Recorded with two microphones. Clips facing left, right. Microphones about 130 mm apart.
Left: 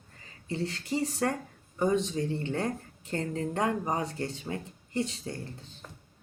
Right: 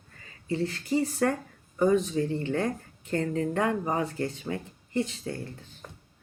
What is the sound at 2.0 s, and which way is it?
Speech, 35° right (ahead or behind).